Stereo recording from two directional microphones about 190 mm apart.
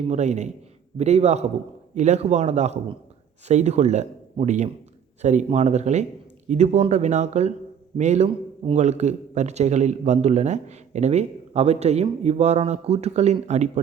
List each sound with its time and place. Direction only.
0.1 s a man's voice: 35° right (ahead or behind)